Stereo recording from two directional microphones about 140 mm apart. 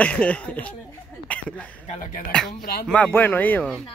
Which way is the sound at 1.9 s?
65° left (ahead or behind).